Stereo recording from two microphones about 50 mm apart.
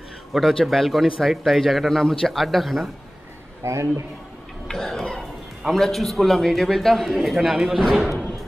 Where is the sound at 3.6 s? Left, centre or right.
Right.